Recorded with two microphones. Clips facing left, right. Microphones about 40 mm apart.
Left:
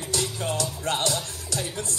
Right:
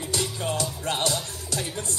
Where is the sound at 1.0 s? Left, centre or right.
Right.